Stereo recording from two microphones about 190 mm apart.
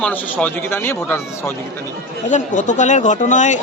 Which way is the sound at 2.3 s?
40° left (ahead or behind).